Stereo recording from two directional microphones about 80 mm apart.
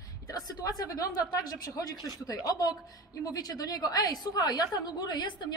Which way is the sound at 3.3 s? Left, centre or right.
Left.